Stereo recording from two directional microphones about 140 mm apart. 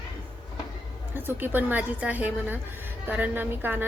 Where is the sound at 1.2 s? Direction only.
15° right (ahead or behind).